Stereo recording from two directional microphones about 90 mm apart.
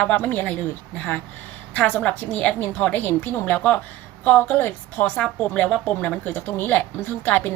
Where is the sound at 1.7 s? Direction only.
15° left (ahead or behind).